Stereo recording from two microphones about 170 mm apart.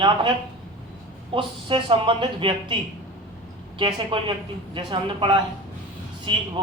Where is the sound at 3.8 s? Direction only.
30° right (ahead or behind).